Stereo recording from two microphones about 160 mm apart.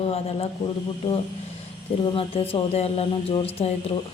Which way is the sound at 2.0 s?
35° left (ahead or behind).